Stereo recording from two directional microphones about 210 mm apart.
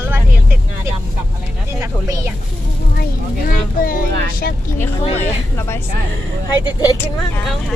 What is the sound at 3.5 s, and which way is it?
Speech, 40° left (ahead or behind).